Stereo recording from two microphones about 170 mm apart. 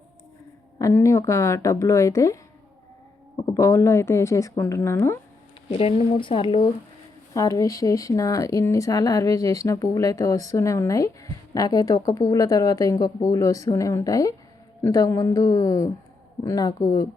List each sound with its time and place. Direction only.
0.8 s speech: 20° left (ahead or behind)
5.7 s speech: 35° left (ahead or behind)
7.3 s speech: 20° left (ahead or behind)